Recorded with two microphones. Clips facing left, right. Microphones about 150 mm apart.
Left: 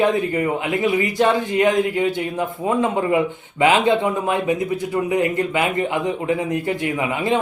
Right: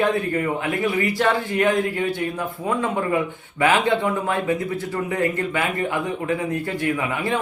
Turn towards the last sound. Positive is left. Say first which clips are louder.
# left 2 dB
turn(degrees=20)  # may be behind; listen again after turning